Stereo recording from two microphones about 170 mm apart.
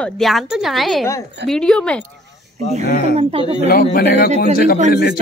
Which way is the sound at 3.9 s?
70° left (ahead or behind).